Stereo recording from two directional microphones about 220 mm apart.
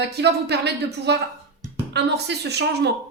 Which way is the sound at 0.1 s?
50° right (ahead or behind).